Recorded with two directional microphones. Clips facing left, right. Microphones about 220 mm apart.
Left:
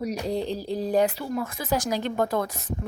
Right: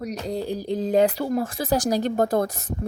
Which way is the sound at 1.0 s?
35° right (ahead or behind).